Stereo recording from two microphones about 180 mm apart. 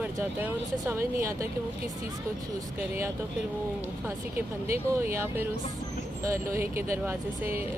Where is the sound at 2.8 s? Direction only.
15° right (ahead or behind).